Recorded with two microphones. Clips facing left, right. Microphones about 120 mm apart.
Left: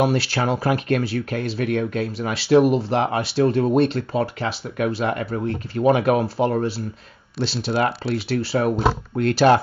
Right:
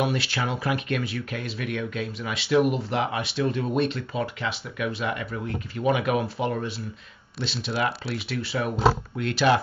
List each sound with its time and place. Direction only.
0.0 s speech: 35° left (ahead or behind)